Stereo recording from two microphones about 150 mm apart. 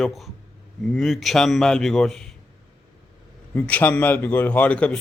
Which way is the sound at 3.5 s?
10° left (ahead or behind).